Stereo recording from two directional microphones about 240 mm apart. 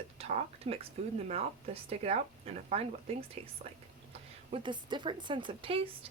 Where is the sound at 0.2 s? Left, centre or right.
Right.